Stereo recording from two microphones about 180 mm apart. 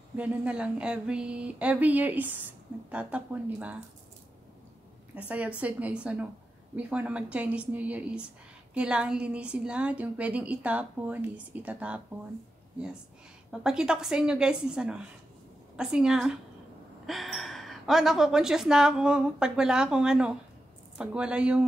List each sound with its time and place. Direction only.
0.1 s speech: 10° right (ahead or behind)
5.1 s speech: 10° right (ahead or behind)
13.5 s a woman's voice: 5° right (ahead or behind)